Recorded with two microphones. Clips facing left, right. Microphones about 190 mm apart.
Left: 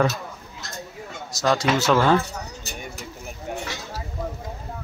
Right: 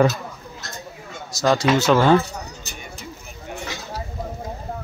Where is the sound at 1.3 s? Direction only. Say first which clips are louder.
Right 3 dB; centre (ahead or behind).